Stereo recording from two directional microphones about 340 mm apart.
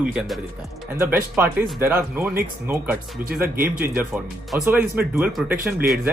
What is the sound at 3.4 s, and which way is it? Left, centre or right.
Speech, right.